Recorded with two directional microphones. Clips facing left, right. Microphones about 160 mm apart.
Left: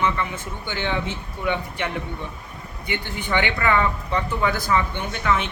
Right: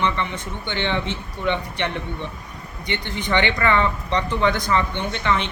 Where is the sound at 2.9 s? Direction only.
10° left (ahead or behind).